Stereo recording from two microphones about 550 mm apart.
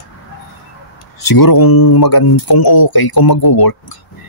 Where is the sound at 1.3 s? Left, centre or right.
Left.